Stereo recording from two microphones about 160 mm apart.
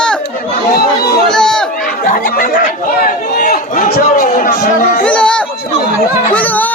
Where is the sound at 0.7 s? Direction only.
75° left (ahead or behind).